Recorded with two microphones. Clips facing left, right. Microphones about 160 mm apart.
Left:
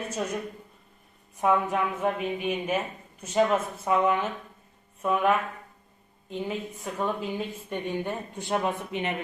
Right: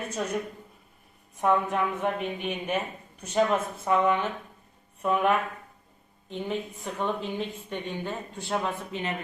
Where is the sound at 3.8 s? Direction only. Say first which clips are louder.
Right 1 dB; 5° left (ahead or behind).